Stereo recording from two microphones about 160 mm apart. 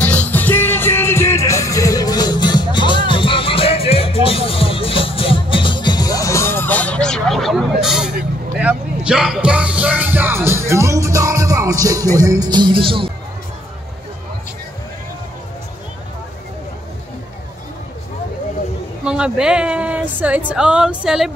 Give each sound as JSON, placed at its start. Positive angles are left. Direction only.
{"t": 0.0, "sound": "music", "side_deg": 10}
{"t": 19.0, "sound": "a woman's voice", "side_deg": -5}